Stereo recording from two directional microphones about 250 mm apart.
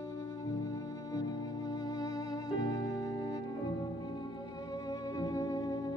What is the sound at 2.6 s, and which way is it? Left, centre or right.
Music, centre.